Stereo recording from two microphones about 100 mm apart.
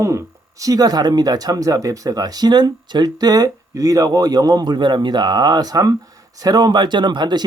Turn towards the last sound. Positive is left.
turn(degrees=-45)  # may be behind; listen again after turning